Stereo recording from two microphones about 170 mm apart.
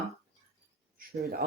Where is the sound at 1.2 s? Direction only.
65° right (ahead or behind).